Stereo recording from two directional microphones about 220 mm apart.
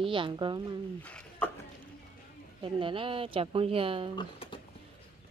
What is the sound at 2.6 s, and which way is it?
A woman's voice, 25° right (ahead or behind).